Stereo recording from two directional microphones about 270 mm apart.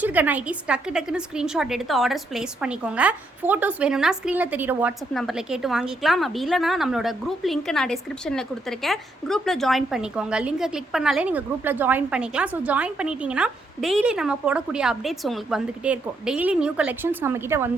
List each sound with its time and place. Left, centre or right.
0.0 s a woman's voice: centre